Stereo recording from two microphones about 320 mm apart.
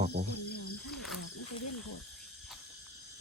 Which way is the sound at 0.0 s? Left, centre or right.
Right.